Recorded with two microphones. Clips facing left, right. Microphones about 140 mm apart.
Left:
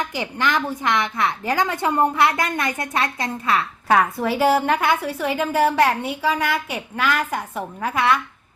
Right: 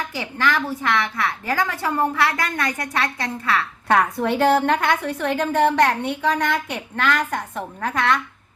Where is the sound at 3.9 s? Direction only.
5° left (ahead or behind).